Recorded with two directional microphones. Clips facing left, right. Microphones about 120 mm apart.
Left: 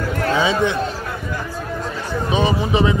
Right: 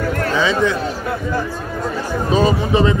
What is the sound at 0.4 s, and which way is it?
Speech, 25° left (ahead or behind).